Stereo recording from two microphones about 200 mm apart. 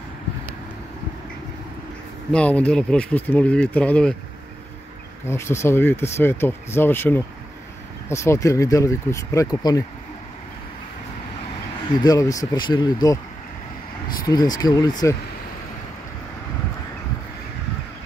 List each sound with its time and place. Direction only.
2.3 s speech: 5° left (ahead or behind)
5.2 s speech: 15° left (ahead or behind)
12.0 s speech: 15° left (ahead or behind)
14.2 s speech: 20° left (ahead or behind)